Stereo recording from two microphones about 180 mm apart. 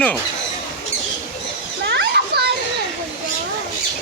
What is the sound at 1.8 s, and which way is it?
Children playing, 65° right (ahead or behind).